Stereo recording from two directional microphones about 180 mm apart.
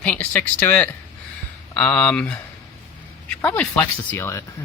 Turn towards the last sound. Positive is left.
turn(degrees=15)  # may be behind; listen again after turning